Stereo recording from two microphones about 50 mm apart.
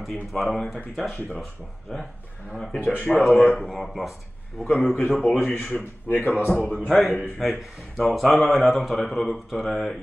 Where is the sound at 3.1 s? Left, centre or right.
Centre.